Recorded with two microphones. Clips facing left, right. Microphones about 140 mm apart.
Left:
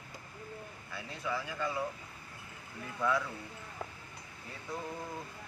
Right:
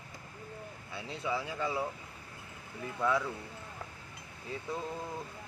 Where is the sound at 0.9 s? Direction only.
25° right (ahead or behind).